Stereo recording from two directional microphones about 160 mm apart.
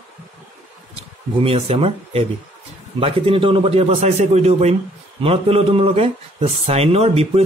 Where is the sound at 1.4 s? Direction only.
35° right (ahead or behind).